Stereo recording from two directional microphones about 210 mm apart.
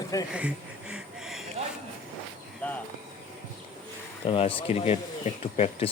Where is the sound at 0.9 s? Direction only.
Centre (ahead or behind).